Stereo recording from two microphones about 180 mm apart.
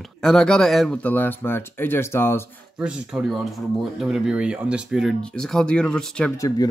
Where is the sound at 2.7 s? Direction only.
5° right (ahead or behind).